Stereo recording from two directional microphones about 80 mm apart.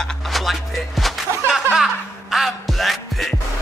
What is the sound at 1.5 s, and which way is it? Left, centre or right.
Music, centre.